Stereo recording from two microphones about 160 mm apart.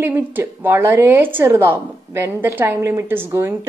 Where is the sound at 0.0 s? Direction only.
15° right (ahead or behind).